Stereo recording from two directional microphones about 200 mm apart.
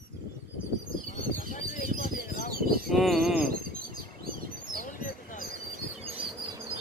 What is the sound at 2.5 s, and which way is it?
Bird, 50° right (ahead or behind).